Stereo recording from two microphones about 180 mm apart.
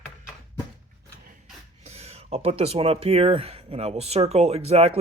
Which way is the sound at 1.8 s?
35° right (ahead or behind).